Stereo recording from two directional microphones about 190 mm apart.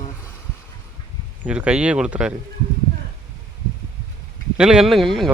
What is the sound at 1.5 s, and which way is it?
Speech, 5° right (ahead or behind).